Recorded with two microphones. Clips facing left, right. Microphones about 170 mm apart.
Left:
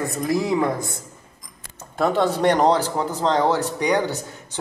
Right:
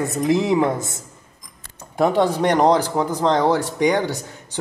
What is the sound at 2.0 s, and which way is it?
Speech, 15° right (ahead or behind).